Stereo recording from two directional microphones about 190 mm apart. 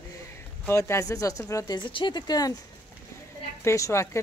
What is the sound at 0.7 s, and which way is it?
A woman's voice, 15° left (ahead or behind).